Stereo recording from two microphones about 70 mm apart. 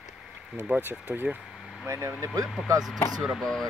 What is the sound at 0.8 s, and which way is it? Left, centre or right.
Speech, right.